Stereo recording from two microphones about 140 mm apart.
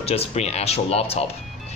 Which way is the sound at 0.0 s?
45° left (ahead or behind).